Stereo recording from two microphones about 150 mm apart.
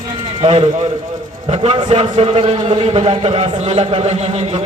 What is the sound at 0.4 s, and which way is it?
A man's voice, 45° right (ahead or behind).